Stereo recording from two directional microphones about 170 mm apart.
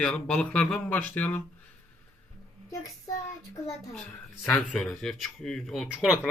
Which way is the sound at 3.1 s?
20° left (ahead or behind).